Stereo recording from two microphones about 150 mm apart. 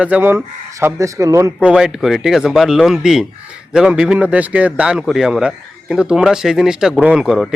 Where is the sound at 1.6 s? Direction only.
5° right (ahead or behind).